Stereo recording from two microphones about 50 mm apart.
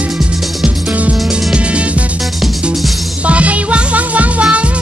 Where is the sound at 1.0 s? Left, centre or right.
Right.